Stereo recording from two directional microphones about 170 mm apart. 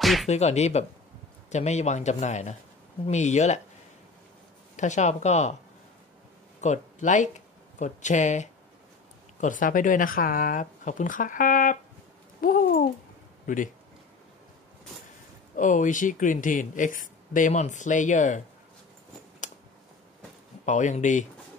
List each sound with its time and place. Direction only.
0.0 s speech: centre (ahead or behind)
0.3 s speech: 40° left (ahead or behind)
4.7 s speech: 45° left (ahead or behind)
6.6 s speech: 45° left (ahead or behind)
15.5 s speech: 50° left (ahead or behind)
19.4 s a sound: 45° left (ahead or behind)
20.6 s speech: 45° left (ahead or behind)